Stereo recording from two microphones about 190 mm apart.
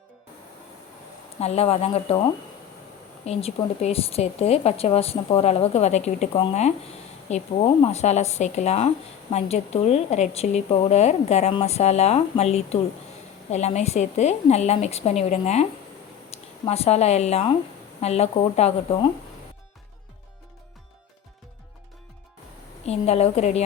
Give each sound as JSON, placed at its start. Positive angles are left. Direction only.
{"t": 1.4, "sound": "speech", "side_deg": 35}
{"t": 3.2, "sound": "speech", "side_deg": 35}
{"t": 22.9, "sound": "speech", "side_deg": 35}